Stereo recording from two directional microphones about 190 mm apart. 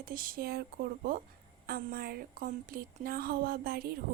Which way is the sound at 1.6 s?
50° right (ahead or behind).